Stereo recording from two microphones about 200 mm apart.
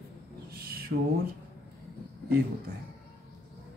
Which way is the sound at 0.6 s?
50° right (ahead or behind).